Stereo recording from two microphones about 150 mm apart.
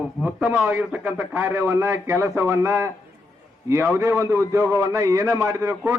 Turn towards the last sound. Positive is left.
turn(degrees=-20)  # may be behind; listen again after turning